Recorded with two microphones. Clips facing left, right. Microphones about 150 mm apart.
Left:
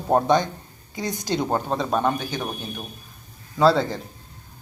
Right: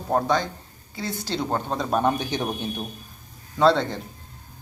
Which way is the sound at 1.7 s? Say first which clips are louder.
Right 3 dB; centre (ahead or behind).